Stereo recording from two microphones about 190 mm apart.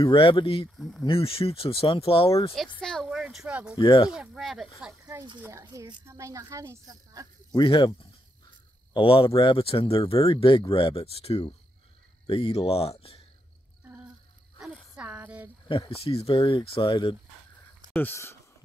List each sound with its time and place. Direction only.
0.0 s speech: 25° left (ahead or behind)
0.7 s speech: centre (ahead or behind)
1.0 s speech: 30° left (ahead or behind)
2.8 s speech: centre (ahead or behind)
3.8 s speech: 25° left (ahead or behind)
4.1 s speech: centre (ahead or behind)
5.0 s a sound: 20° right (ahead or behind)
5.4 s speech: 15° right (ahead or behind)
7.5 s speech: 25° left (ahead or behind)
14.6 s a sound: 5° right (ahead or behind)
15.7 s speech: 30° left (ahead or behind)
17.9 s speech: 10° left (ahead or behind)